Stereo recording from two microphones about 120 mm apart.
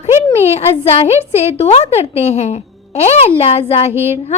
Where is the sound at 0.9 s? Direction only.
60° left (ahead or behind).